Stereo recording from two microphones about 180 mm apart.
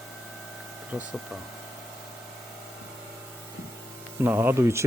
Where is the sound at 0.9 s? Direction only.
5° right (ahead or behind).